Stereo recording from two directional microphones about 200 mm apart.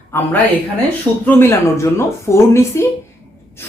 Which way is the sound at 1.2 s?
15° left (ahead or behind).